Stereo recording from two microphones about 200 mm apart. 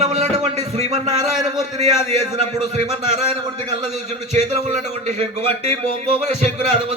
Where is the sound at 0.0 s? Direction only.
30° right (ahead or behind).